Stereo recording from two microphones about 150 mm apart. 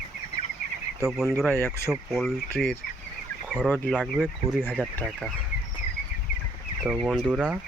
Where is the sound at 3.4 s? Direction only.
5° right (ahead or behind).